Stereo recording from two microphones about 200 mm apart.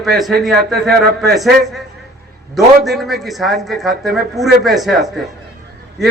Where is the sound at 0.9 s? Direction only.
55° right (ahead or behind).